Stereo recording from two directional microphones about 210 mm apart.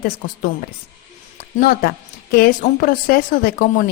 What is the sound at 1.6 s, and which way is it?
A woman's voice, 45° left (ahead or behind).